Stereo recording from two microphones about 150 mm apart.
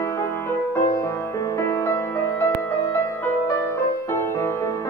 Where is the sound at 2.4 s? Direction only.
20° left (ahead or behind).